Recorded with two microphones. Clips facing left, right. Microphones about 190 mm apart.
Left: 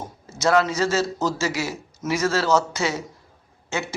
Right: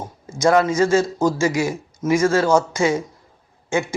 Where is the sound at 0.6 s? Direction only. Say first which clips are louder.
Right 5 dB; 50° right (ahead or behind).